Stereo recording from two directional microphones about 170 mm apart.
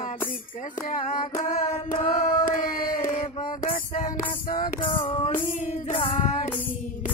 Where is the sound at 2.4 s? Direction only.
55° left (ahead or behind).